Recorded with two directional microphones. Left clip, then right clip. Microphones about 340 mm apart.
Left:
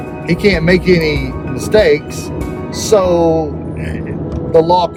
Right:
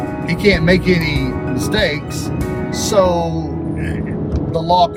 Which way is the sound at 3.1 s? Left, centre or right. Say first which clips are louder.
Left 8 dB; right.